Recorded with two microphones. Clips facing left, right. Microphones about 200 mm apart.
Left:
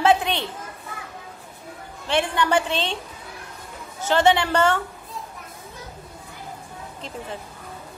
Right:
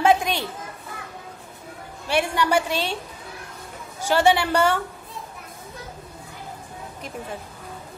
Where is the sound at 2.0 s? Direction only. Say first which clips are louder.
Even; 10° right (ahead or behind).